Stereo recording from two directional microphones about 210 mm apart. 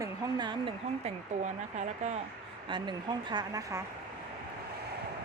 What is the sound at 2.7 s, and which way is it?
Speech, 20° right (ahead or behind).